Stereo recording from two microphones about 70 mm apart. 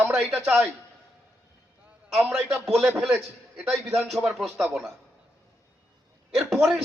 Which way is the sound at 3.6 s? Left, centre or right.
Centre.